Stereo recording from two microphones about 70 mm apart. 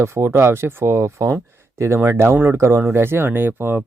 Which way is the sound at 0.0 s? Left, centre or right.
Right.